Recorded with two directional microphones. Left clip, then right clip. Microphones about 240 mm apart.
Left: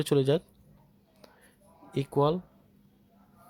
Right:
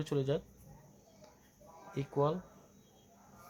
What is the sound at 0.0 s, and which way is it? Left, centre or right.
Speech, left.